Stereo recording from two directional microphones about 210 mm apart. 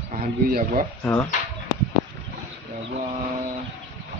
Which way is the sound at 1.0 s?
10° left (ahead or behind).